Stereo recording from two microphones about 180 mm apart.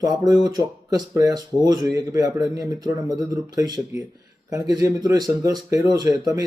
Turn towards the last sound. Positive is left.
turn(degrees=-20)  # may be behind; listen again after turning